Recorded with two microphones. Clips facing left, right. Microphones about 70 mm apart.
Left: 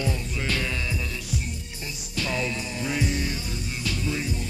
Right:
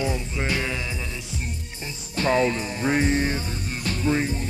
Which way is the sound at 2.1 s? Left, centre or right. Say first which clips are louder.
Right 8 dB; right.